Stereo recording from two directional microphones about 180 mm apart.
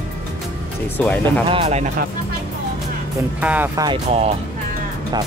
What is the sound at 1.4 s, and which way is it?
Speech, 30° right (ahead or behind).